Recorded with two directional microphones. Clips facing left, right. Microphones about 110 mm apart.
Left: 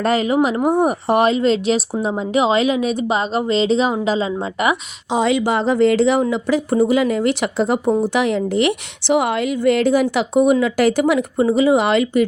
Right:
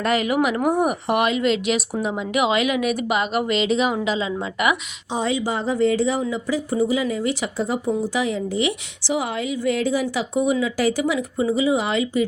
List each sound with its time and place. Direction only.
0.0 s speech: 30° left (ahead or behind)
5.1 s speech: 85° left; by 12.2 s 65° left (ahead or behind)